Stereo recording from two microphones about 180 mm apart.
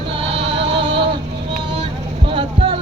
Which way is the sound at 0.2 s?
30° right (ahead or behind).